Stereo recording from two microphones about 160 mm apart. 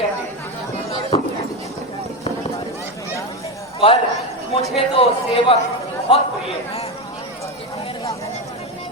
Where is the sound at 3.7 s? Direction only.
35° left (ahead or behind).